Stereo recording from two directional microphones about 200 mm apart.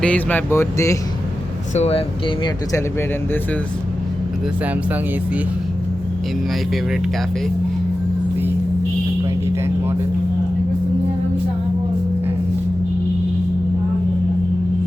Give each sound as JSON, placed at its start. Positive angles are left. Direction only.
{"t": 0.0, "sound": "speech", "side_deg": 5}
{"t": 1.7, "sound": "speech", "side_deg": 30}